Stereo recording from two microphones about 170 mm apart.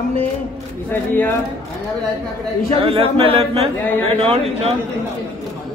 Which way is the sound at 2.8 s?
35° right (ahead or behind).